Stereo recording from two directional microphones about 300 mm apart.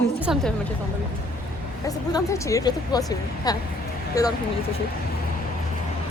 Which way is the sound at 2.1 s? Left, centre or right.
Centre.